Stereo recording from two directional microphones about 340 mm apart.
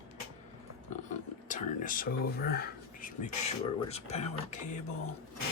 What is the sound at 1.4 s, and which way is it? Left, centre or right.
Speech, left.